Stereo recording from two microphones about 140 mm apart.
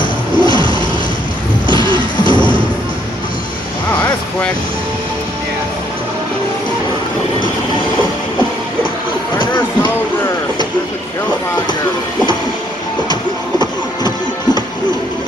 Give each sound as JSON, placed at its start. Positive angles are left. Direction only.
{"t": 0.0, "sound": "music", "side_deg": 30}
{"t": 1.7, "sound": "music", "side_deg": -35}
{"t": 13.1, "sound": "music", "side_deg": 30}